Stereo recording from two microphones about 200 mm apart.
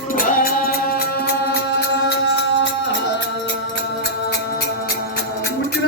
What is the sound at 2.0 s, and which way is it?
Music, 65° left (ahead or behind).